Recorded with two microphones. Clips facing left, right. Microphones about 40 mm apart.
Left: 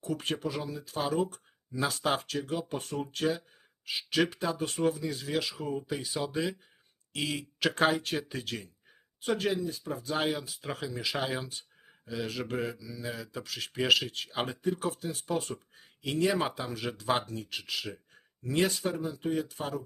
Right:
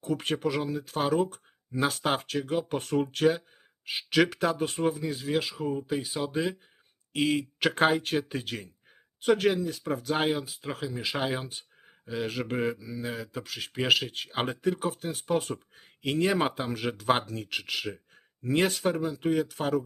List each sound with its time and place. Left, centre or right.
0.0 s speech: right
3.9 s speech: right
9.2 s speech: right
10.1 s speech: right
10.5 s speech: centre
11.0 s speech: right
12.7 s speech: right
13.1 s speech: right
14.6 s speech: right
15.0 s speech: right
17.2 s speech: right
17.8 s speech: right
18.4 s speech: right